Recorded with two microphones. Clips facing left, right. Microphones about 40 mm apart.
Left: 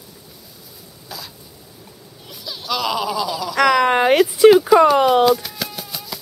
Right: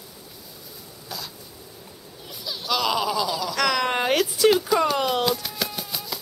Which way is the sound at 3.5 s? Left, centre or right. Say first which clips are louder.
Left 10 dB; centre.